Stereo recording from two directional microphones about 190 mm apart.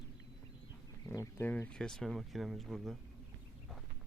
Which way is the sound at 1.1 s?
10° left (ahead or behind).